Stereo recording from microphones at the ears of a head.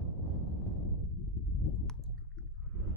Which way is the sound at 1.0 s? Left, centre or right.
Left.